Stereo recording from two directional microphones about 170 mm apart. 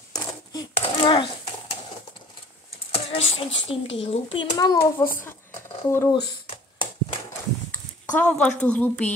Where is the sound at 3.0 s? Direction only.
35° left (ahead or behind).